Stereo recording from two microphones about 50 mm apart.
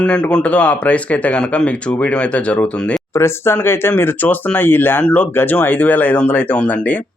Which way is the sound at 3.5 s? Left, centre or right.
Left.